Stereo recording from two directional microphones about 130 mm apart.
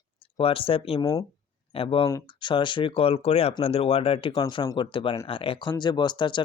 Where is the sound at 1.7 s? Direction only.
45° left (ahead or behind).